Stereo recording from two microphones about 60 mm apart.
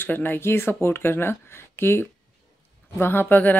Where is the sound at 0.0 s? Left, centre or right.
Left.